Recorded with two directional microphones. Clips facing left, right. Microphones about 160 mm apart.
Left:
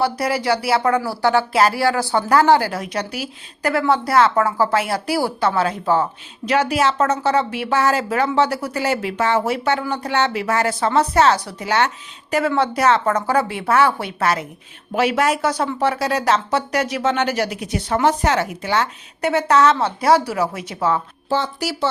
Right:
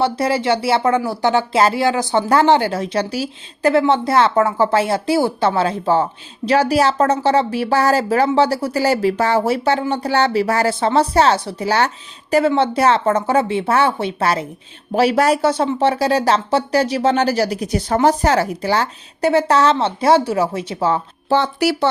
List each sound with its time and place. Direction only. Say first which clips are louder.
0.0 s speech: right 3 dB; 25° right (ahead or behind)
21.2 s speech: right 6 dB; 65° right (ahead or behind)